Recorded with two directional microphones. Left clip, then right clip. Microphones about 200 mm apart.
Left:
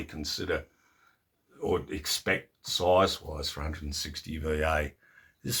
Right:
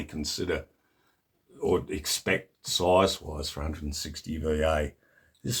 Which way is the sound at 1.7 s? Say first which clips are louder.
Right 2 dB; 55° right (ahead or behind).